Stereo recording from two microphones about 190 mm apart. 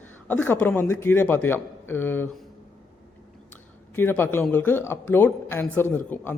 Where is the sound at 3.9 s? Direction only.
10° left (ahead or behind).